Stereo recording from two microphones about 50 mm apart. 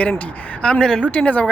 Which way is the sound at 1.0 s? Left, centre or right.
Left.